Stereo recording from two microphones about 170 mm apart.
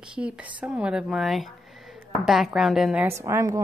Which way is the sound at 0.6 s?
5° right (ahead or behind).